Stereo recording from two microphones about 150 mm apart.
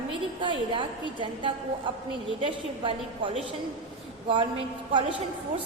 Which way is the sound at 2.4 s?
35° right (ahead or behind).